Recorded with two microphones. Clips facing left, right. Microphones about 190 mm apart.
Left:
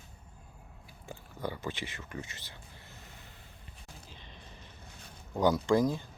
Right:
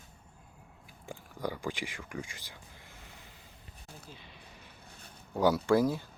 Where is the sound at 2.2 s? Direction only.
10° right (ahead or behind).